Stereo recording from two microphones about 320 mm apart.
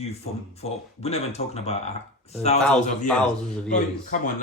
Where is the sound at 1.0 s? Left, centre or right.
Centre.